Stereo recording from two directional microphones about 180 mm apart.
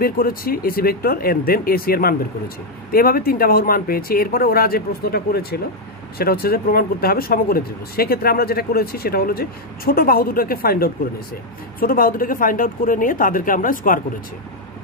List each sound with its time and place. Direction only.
0.0 s speech: 55° left (ahead or behind)